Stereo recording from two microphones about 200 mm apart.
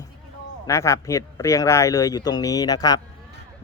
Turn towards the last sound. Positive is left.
turn(degrees=20)  # may be behind; listen again after turning